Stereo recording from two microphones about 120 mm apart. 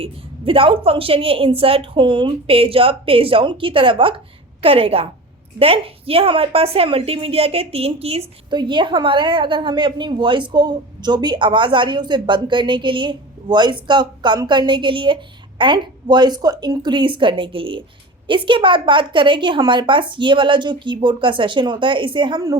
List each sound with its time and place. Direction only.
0.0 s a woman's voice: 50° right (ahead or behind)
8.4 s a woman's voice: 40° right (ahead or behind)